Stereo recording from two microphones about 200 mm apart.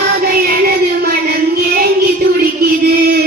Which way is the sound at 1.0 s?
50° right (ahead or behind).